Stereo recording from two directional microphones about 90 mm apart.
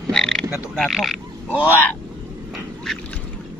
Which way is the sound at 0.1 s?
5° left (ahead or behind).